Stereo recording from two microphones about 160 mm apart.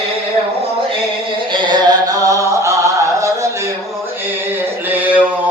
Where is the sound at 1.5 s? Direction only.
30° right (ahead or behind).